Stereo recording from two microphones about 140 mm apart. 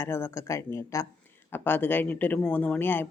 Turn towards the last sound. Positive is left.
turn(degrees=15)  # may be behind; listen again after turning